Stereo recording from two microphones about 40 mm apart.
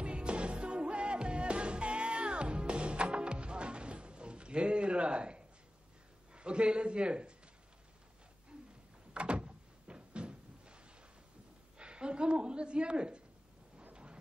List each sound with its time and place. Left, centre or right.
0.0 s music: right
6.3 s a man's voice: right
9.1 s door: right
11.8 s a woman's voice: right